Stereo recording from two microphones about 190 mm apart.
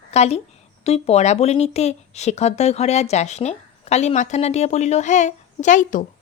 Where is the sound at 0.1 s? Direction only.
35° left (ahead or behind).